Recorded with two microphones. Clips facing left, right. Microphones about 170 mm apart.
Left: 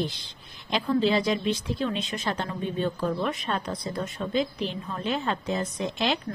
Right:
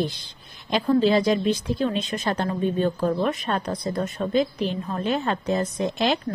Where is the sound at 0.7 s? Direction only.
45° right (ahead or behind).